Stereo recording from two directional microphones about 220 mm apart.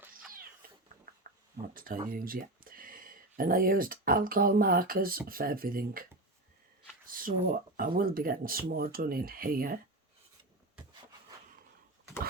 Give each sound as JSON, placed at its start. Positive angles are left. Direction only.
{"t": 1.7, "sound": "speech", "side_deg": -40}
{"t": 7.1, "sound": "speech", "side_deg": -40}